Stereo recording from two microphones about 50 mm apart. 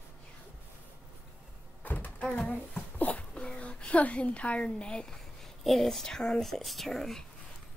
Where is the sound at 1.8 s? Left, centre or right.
Left; by 5.2 s centre.